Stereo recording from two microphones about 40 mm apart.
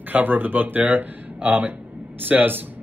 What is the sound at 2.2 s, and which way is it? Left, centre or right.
Speech, right.